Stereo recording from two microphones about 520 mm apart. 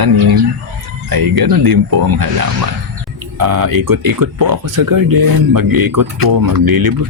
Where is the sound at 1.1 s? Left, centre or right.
Right.